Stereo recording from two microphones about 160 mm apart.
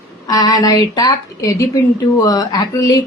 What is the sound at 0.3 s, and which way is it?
Speech, 25° left (ahead or behind).